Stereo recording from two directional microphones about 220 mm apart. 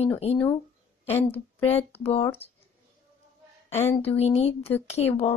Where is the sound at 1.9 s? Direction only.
25° left (ahead or behind).